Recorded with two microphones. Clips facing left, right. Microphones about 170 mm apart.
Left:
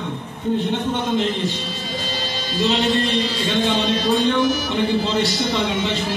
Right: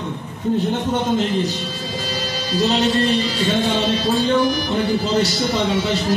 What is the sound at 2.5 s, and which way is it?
Music, 40° right (ahead or behind).